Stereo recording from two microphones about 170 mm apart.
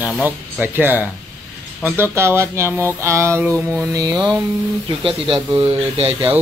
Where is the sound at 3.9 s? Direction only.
20° right (ahead or behind).